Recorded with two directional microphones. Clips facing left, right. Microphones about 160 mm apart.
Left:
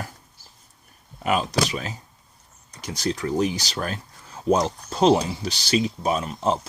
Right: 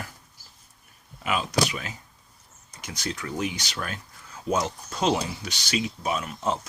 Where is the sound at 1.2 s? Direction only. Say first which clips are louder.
Left 3 dB; 40° left (ahead or behind).